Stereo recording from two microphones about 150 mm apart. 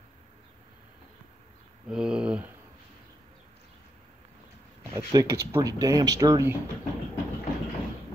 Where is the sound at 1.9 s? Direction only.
5° right (ahead or behind).